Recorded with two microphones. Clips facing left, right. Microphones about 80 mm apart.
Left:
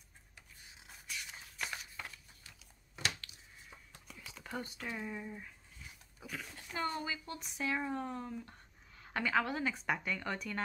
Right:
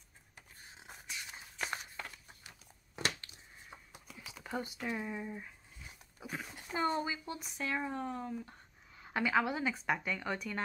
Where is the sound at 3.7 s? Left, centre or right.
Right.